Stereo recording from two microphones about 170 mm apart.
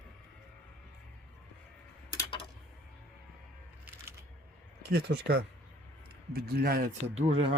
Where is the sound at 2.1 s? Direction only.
30° left (ahead or behind).